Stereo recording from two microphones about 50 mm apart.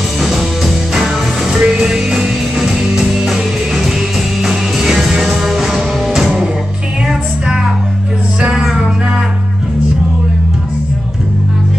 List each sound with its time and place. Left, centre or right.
0.9 s music: centre